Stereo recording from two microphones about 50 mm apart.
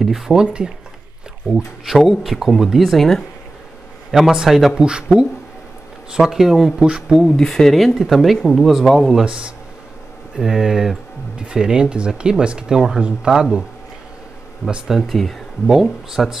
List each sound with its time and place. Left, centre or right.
0.0 s speech: centre
1.9 s speech: centre
4.1 s speech: centre
4.7 s speech: centre
6.1 s speech: centre
7.2 s speech: centre
9.2 s speech: centre
10.3 s speech: centre
14.9 s speech: centre
15.6 s speech: centre